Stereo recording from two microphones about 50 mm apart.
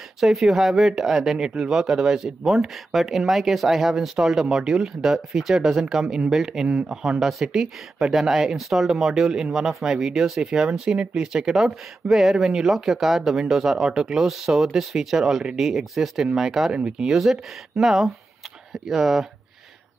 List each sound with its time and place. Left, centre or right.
0.2 s speech: centre
16.7 s speech: right
17.1 s speech: centre